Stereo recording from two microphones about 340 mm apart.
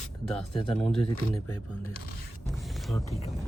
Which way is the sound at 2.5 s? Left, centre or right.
Centre.